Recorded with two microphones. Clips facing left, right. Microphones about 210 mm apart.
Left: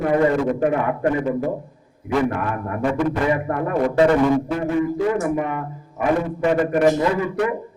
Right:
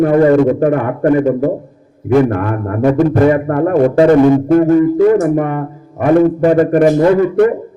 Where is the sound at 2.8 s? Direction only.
40° right (ahead or behind).